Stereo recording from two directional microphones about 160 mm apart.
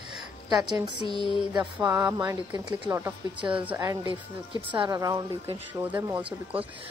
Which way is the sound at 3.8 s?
25° right (ahead or behind).